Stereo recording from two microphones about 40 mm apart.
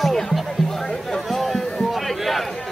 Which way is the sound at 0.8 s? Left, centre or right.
Centre.